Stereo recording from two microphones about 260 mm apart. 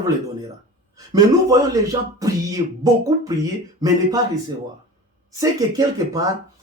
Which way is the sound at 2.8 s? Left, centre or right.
Centre.